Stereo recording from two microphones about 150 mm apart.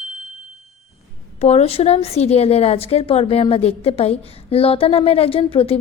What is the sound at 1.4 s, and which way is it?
A woman's voice, 45° left (ahead or behind).